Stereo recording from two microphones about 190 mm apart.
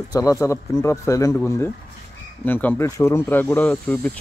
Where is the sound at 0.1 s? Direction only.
15° left (ahead or behind).